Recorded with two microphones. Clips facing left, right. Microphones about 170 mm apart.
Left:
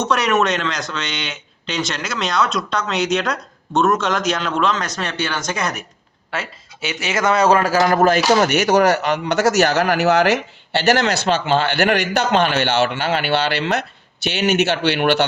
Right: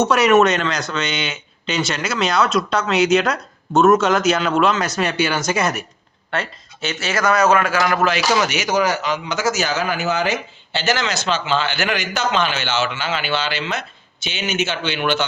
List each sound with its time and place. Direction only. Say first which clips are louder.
0.0 s speech: right 4 dB; 5° right (ahead or behind)
6.3 s speech: right 2 dB; 5° left (ahead or behind)
7.0 s a man's voice: left 1 dB; 20° left (ahead or behind)
8.0 s speech: left 4 dB; 50° left (ahead or behind)